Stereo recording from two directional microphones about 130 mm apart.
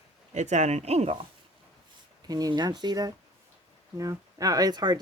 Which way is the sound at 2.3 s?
30° right (ahead or behind).